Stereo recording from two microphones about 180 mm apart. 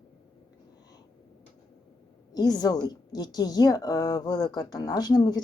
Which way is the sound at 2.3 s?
20° left (ahead or behind).